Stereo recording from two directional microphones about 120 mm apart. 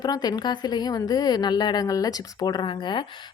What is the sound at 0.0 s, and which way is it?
A woman's voice, 35° left (ahead or behind).